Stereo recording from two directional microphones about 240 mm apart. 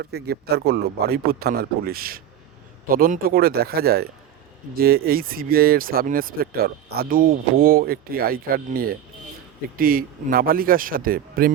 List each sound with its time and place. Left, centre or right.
0.0 s speech: right